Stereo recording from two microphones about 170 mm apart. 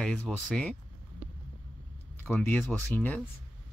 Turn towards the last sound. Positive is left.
turn(degrees=10)  # may be behind; listen again after turning